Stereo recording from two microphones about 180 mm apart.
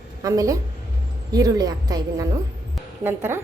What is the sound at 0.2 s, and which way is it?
A woman's voice, 20° right (ahead or behind).